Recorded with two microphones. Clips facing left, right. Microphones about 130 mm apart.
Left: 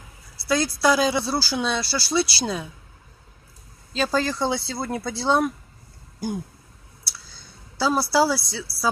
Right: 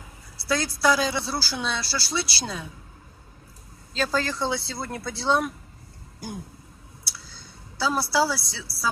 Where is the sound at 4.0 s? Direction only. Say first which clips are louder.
Left 3 dB; 15° left (ahead or behind).